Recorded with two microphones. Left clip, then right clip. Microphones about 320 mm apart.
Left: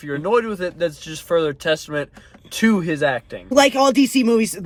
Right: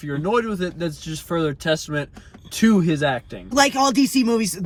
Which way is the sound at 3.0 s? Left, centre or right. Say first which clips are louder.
Left 2 dB; left.